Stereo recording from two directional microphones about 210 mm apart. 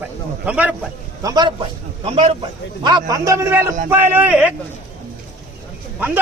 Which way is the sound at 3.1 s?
15° right (ahead or behind).